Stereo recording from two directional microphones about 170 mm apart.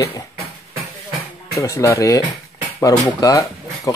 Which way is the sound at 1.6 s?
20° left (ahead or behind).